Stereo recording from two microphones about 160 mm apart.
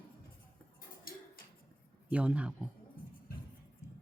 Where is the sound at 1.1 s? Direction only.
65° left (ahead or behind).